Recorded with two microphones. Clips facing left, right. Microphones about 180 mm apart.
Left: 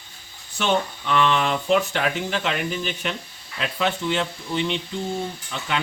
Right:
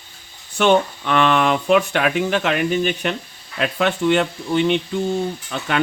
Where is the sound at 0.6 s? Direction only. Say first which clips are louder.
Right 7 dB; 60° right (ahead or behind).